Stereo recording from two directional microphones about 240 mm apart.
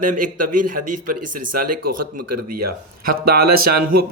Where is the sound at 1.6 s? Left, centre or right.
Right.